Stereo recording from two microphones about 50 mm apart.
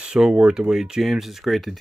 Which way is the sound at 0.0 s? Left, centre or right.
Centre.